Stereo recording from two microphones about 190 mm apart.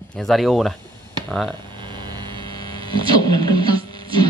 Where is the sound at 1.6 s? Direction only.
25° right (ahead or behind).